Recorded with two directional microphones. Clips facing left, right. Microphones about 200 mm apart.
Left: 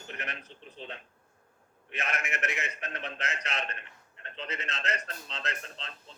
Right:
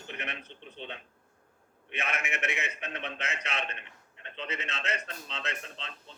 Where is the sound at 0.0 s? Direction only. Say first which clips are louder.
Right 1 dB; centre (ahead or behind).